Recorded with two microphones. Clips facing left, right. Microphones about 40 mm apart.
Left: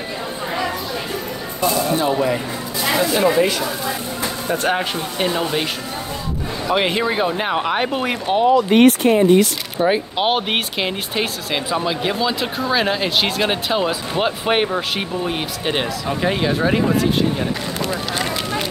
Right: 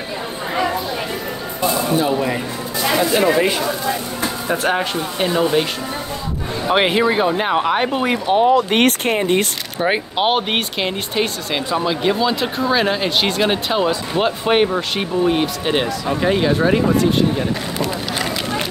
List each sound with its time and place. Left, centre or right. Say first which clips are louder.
2.0 s speech: even; centre
4.6 s speech: right 1 dB; centre
6.9 s speech: right 3 dB; centre
8.5 s speech: left 3 dB; right
9.8 s speech: even; centre